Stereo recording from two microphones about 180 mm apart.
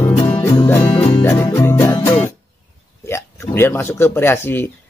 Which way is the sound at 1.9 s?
30° left (ahead or behind).